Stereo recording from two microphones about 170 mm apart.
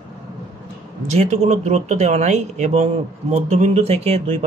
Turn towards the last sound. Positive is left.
turn(degrees=-40)  # may be behind; listen again after turning